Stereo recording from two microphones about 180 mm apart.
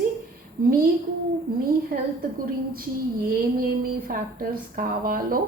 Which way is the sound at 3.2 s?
55° right (ahead or behind).